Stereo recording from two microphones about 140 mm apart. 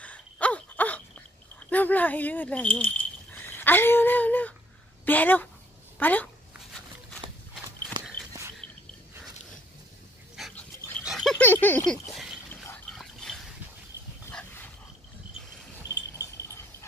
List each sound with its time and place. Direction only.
0.0 s dog: 10° left (ahead or behind)
1.7 s speech: 10° left (ahead or behind)
7.9 s horse: 25° right (ahead or behind)
10.4 s dog: 5° right (ahead or behind)
11.1 s a sound: centre (ahead or behind)
11.4 s a sound: 15° left (ahead or behind)